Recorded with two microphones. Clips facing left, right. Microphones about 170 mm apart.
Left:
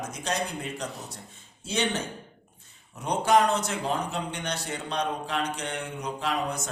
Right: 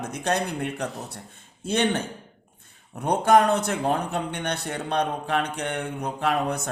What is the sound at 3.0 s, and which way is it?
Speech, 55° right (ahead or behind).